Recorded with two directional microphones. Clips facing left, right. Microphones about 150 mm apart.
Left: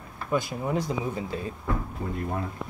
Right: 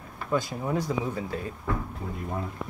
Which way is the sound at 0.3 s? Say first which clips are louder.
Even; 10° left (ahead or behind).